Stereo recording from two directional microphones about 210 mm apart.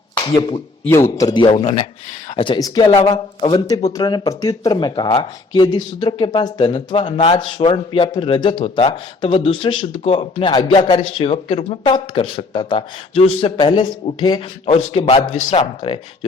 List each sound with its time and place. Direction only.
0.3 s speech: 25° left (ahead or behind)
0.9 s speech: 10° left (ahead or behind); by 15.6 s 35° left (ahead or behind)